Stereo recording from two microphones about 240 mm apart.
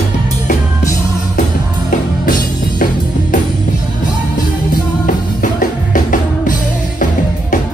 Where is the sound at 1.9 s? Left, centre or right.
Left.